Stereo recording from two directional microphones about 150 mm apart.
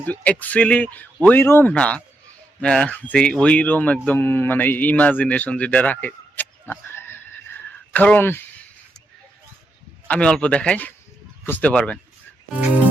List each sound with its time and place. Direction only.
0.0 s a man's voice: 10° left (ahead or behind)
10.1 s speech: 5° left (ahead or behind)